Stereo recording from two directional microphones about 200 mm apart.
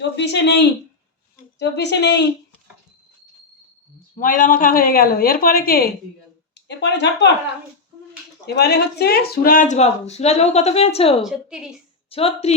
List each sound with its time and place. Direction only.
0.2 s a woman's voice: 60° left (ahead or behind)
4.1 s a woman's voice: 40° left (ahead or behind)
6.5 s speech: 60° left (ahead or behind)
8.4 s a woman's voice: 55° left (ahead or behind); by 11.2 s 30° left (ahead or behind)
11.2 s a woman's voice: centre (ahead or behind)
12.1 s speech: 30° left (ahead or behind)